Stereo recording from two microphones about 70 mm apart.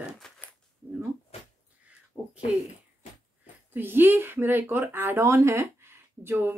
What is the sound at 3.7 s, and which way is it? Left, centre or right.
Speech, right.